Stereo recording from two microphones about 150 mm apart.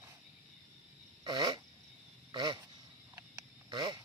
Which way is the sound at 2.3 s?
30° right (ahead or behind).